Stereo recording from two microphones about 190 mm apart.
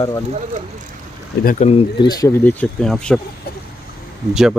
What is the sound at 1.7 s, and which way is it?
Speech, 25° left (ahead or behind).